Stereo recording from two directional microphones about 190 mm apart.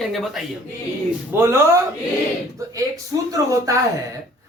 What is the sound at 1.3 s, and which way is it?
Speech, 15° right (ahead or behind).